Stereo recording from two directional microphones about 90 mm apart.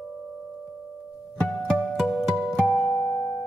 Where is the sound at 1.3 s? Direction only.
10° left (ahead or behind); by 3.5 s 10° right (ahead or behind).